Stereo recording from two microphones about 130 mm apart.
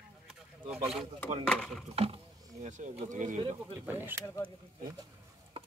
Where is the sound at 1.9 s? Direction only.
50° right (ahead or behind).